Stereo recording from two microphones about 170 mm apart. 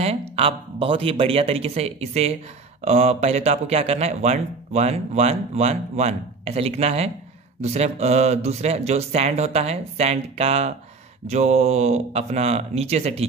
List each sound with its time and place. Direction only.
0.0 s speech: 35° right (ahead or behind)